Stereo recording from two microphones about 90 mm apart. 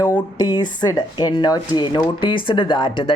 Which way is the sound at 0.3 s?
50° left (ahead or behind).